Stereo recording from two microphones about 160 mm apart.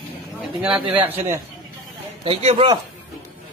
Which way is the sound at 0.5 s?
5° right (ahead or behind).